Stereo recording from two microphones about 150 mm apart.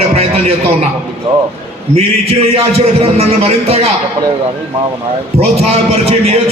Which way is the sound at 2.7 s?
45° right (ahead or behind).